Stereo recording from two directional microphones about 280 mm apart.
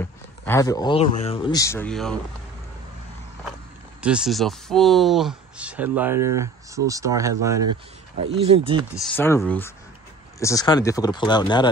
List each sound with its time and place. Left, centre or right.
0.0 s speech: centre
4.0 s speech: centre; by 8.8 s right
8.9 s speech: centre